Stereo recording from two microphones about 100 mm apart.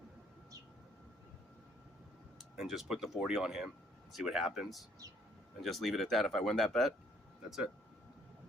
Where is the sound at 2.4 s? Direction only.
5° right (ahead or behind).